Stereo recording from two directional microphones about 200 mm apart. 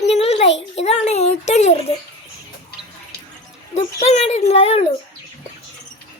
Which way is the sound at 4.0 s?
35° left (ahead or behind).